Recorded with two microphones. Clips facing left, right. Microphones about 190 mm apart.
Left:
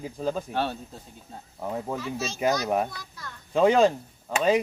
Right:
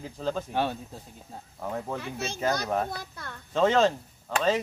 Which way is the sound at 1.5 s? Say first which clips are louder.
Left 2 dB; 10° left (ahead or behind).